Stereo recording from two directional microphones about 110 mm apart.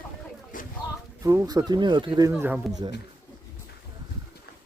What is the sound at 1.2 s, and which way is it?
Speech, 30° right (ahead or behind).